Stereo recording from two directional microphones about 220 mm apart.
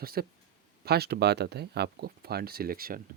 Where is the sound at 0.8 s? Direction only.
45° right (ahead or behind).